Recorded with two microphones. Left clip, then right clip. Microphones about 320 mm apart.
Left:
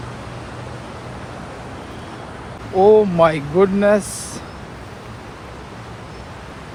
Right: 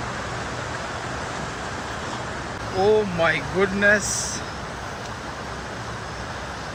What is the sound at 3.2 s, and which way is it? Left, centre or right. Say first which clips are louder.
Speech: left 6 dB; centre.